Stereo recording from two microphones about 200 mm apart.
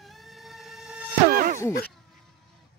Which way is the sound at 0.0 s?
Centre (ahead or behind).